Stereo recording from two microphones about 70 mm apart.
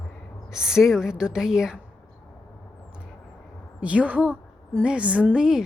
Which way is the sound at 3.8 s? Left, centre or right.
Centre.